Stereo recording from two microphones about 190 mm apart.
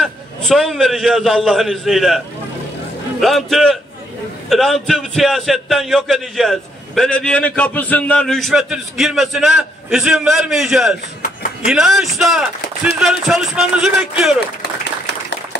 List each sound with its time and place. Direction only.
0.0 s a man's voice: centre (ahead or behind)
14.6 s applause: 65° left (ahead or behind)